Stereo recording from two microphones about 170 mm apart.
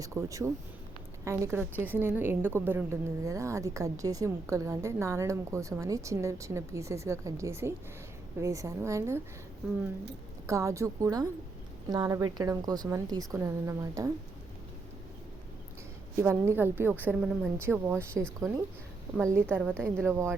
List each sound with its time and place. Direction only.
0.0 s a woman's voice: 15° right (ahead or behind)
10.4 s a woman's voice: 15° right (ahead or behind)
16.1 s a woman's voice: 15° right (ahead or behind)
19.3 s a woman's voice: 15° right (ahead or behind)